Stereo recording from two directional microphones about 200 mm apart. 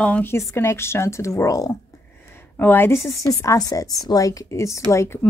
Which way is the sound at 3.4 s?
15° left (ahead or behind).